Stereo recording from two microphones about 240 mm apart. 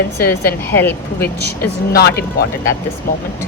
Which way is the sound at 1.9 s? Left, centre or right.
Left.